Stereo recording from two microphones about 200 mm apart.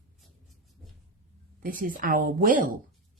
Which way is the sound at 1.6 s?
45° right (ahead or behind).